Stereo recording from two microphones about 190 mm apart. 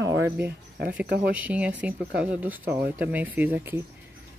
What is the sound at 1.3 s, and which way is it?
Speech, 5° right (ahead or behind).